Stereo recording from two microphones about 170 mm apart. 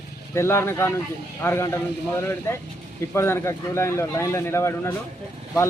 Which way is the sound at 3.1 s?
15° left (ahead or behind).